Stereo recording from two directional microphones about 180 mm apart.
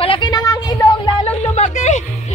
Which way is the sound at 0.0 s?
25° left (ahead or behind).